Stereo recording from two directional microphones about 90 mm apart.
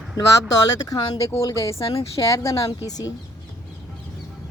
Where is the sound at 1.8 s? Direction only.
90° left.